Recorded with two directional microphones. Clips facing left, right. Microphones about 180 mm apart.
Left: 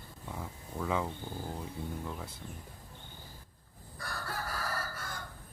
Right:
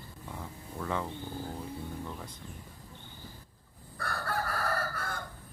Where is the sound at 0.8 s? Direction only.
5° left (ahead or behind).